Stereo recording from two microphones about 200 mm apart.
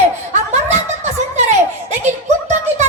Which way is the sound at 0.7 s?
35° right (ahead or behind).